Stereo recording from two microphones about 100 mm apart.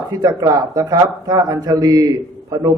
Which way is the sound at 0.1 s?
40° right (ahead or behind).